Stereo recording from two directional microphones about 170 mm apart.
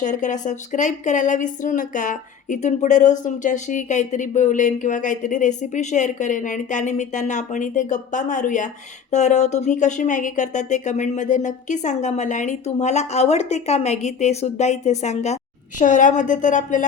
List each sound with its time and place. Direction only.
0.0 s speech: 50° left (ahead or behind)